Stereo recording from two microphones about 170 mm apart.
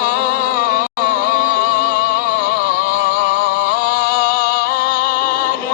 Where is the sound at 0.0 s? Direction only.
60° left (ahead or behind).